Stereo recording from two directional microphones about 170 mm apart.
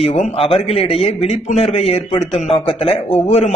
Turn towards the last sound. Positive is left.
turn(degrees=40)  # may be behind; listen again after turning